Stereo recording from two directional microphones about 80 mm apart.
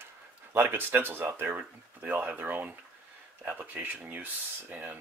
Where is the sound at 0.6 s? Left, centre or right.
Right.